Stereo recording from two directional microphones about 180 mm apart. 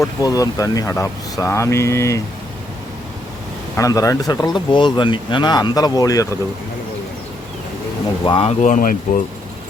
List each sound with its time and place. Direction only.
0.2 s speech: 20° left (ahead or behind)
3.8 s speech: 20° left (ahead or behind)
8.2 s speech: 30° left (ahead or behind)
8.6 s speech: 45° left (ahead or behind)